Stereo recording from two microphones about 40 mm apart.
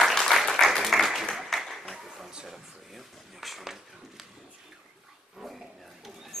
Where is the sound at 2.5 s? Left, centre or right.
Centre.